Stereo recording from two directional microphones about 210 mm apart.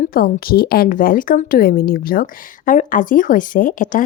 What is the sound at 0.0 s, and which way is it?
Speech, 45° left (ahead or behind).